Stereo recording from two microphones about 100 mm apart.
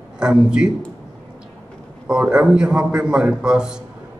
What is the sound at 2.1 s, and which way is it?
A man's voice, 10° right (ahead or behind).